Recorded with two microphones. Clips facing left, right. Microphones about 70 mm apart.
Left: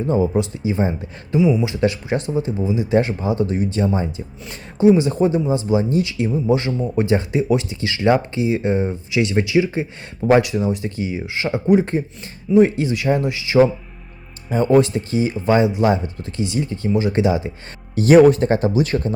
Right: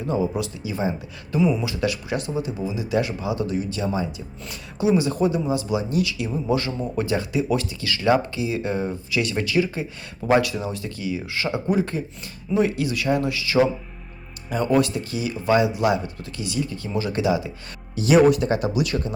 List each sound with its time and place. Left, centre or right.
0.1 s speech: left
1.4 s speech: centre
1.6 s speech: left
17.9 s speech: left